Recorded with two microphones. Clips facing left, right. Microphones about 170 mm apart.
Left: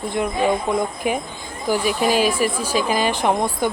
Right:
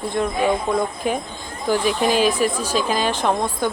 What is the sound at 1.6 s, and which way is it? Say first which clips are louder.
Speech: even; 10° left (ahead or behind).